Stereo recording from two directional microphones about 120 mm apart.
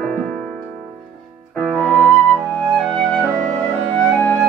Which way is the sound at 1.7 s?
Centre (ahead or behind).